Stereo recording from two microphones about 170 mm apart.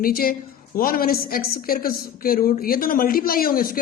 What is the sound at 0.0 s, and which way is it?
A woman's voice, 60° left (ahead or behind).